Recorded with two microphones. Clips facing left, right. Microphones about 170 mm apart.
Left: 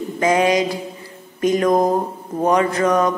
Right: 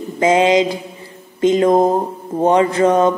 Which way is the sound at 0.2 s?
20° right (ahead or behind).